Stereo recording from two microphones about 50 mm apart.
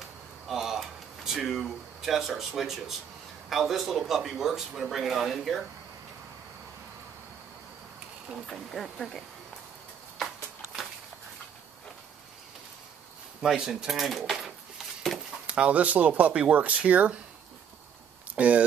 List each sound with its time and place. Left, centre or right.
0.5 s a sound: centre
3.4 s speech: centre
8.5 s speech: centre
13.4 s speech: centre
15.4 s speech: right
18.3 s speech: right